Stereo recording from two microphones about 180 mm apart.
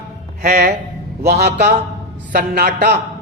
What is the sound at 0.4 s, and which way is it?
A man's voice, 60° right (ahead or behind).